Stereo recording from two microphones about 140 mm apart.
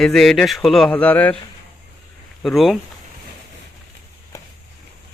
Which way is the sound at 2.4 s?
Centre (ahead or behind).